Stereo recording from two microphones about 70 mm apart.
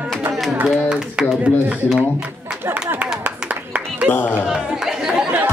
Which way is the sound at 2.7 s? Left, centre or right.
Right.